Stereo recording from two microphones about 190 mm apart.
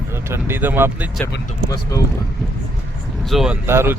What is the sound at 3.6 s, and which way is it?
Speech, 10° right (ahead or behind).